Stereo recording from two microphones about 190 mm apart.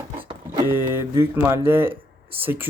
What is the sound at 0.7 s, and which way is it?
Speech, 15° right (ahead or behind).